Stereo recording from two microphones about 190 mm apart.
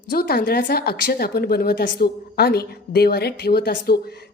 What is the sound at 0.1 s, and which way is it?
Speech, 55° left (ahead or behind).